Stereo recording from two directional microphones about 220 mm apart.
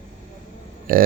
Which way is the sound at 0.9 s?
40° right (ahead or behind).